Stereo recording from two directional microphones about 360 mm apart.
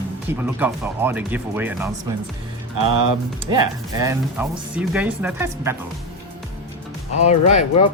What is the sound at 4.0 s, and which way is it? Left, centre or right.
Speech, centre.